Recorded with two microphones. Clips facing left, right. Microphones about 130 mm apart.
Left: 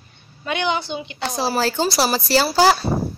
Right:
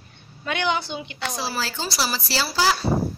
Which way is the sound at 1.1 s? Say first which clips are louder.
Left 7 dB; 40° left (ahead or behind).